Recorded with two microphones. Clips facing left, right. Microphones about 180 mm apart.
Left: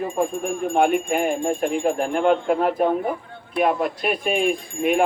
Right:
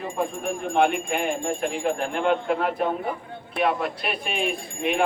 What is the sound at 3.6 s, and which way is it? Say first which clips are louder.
Speech: left 4 dB; 40° left (ahead or behind).